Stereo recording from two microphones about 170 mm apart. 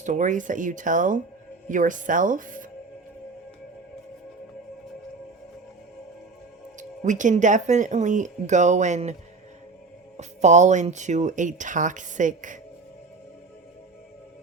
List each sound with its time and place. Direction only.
0.0 s speech: 45° right (ahead or behind)
6.7 s speech: 50° right (ahead or behind)
10.2 s speech: 45° right (ahead or behind)